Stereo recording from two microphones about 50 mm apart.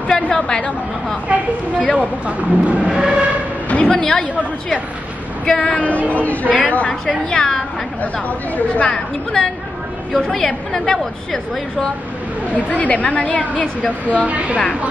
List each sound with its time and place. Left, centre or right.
0.1 s a woman's voice: centre
2.0 s speech: right
2.9 s a sound: centre
3.6 s a sound: left
3.9 s a woman's voice: centre
5.4 s a woman's voice: centre
8.5 s speech: left
8.9 s a woman's voice: centre
12.5 s speech: left
14.2 s speech: right